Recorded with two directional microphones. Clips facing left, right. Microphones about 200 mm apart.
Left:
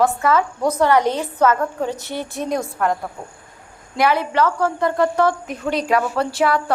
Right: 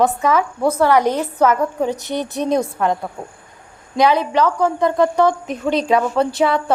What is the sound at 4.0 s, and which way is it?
A woman's voice, 15° right (ahead or behind).